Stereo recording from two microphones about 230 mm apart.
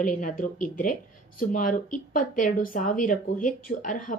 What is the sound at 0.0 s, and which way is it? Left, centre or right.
Speech, left.